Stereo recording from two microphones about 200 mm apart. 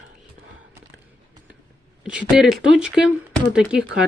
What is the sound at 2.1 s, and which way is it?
Speech, centre (ahead or behind).